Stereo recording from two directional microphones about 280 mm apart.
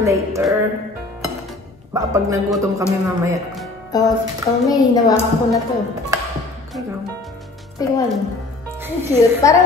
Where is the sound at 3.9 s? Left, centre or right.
Centre.